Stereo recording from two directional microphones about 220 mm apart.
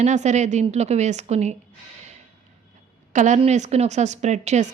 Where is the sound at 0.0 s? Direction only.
30° right (ahead or behind).